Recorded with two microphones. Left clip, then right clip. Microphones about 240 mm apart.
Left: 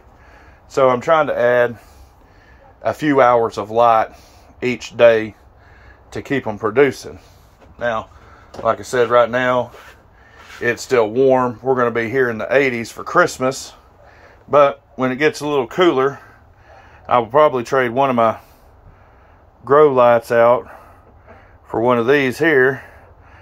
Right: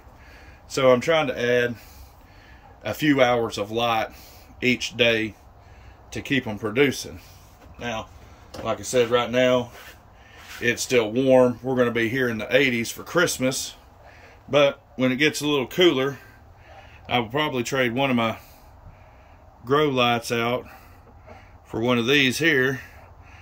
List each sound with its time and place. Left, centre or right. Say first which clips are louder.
0.7 s speech: left 5 dB; centre
2.8 s speech: left 6 dB; centre
6.3 s speech: left 7 dB; centre
8.6 s speech: left 6 dB; left
10.9 s speech: left 6 dB; centre
19.6 s speech: left 10 dB; centre